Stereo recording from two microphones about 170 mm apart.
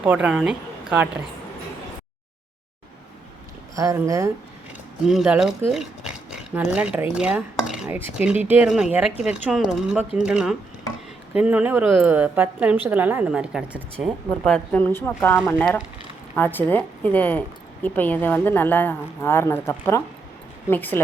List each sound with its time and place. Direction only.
0.0 s a woman's voice: 5° right (ahead or behind)
3.8 s speech: 20° right (ahead or behind)
5.0 s a woman's voice: 5° right (ahead or behind)
13.9 s a woman's voice: 5° left (ahead or behind)